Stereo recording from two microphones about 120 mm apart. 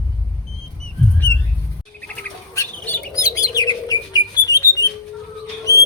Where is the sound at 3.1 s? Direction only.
30° left (ahead or behind).